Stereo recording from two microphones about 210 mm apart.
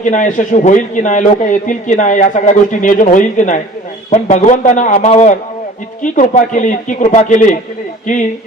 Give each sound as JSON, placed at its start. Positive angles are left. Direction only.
{"t": 0.0, "sound": "a man's voice", "side_deg": 35}